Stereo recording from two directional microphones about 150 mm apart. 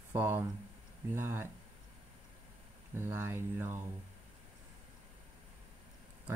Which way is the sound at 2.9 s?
15° right (ahead or behind).